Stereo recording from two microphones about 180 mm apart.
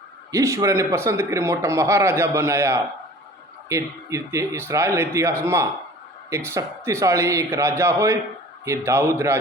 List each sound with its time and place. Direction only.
0.3 s a man's voice: 15° right (ahead or behind)